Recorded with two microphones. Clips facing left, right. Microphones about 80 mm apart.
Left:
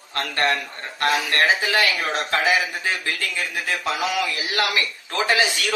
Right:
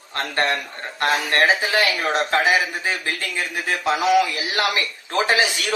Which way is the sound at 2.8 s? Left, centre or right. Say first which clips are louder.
Even; right.